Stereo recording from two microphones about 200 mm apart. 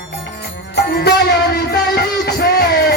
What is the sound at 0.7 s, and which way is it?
Music, 55° left (ahead or behind).